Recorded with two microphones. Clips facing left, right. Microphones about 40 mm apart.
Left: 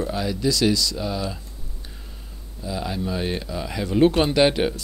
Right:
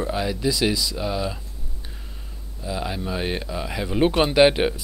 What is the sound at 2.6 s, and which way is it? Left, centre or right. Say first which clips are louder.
Speech: left 1 dB; centre.